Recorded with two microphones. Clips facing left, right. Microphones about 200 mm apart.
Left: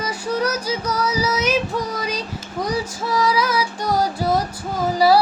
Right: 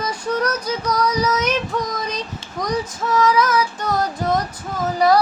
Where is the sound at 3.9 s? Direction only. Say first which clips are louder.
Left 3 dB; 10° left (ahead or behind).